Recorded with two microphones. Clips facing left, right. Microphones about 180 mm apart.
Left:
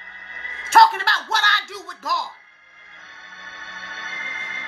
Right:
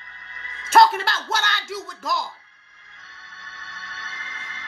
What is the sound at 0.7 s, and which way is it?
A man's voice, centre (ahead or behind).